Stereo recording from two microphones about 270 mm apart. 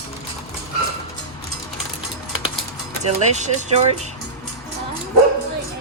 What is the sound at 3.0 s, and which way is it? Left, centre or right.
Speech, right.